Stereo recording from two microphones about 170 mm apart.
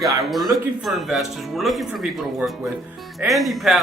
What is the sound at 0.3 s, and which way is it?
Speech, centre (ahead or behind).